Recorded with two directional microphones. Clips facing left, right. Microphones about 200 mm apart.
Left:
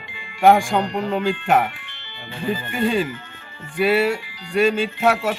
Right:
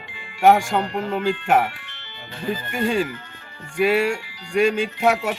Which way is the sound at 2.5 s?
45° right (ahead or behind).